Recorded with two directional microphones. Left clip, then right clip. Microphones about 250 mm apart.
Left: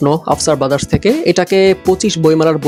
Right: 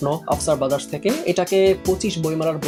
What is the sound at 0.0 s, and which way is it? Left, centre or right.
Speech, left.